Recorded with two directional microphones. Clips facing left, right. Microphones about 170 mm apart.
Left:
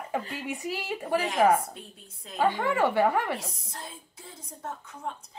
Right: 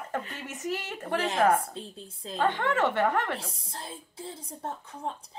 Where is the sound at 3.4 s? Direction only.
30° right (ahead or behind).